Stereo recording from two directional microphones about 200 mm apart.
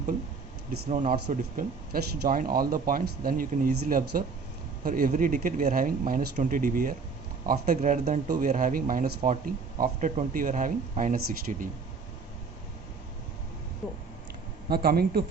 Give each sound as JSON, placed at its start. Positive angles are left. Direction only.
{"t": 0.9, "sound": "speech", "side_deg": -40}
{"t": 14.7, "sound": "speech", "side_deg": -50}